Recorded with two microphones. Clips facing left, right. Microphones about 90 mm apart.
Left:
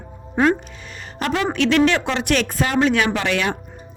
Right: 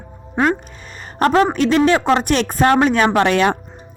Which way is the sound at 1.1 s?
40° right (ahead or behind).